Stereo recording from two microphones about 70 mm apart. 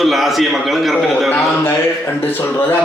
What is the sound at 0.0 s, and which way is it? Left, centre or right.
A man's voice, centre.